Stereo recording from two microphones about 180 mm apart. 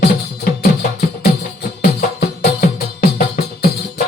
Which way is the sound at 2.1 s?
55° left (ahead or behind).